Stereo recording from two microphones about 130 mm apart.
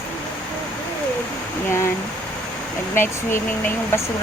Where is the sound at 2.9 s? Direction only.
20° left (ahead or behind).